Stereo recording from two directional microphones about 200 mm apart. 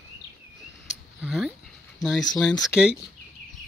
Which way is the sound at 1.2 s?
5° right (ahead or behind).